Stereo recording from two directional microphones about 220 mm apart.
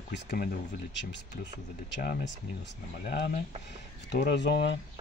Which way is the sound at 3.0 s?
45° left (ahead or behind).